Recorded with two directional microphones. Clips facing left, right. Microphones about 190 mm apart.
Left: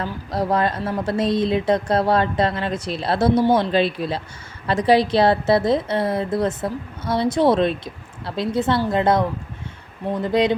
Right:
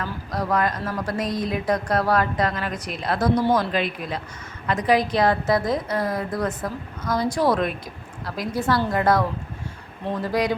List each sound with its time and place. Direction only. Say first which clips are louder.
0.0 s a woman's voice: left 4 dB; 30° left (ahead or behind)
10.2 s a woman's voice: left 5 dB; 25° left (ahead or behind)